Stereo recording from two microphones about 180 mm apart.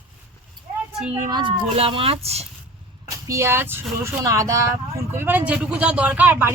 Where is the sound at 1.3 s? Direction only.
25° right (ahead or behind).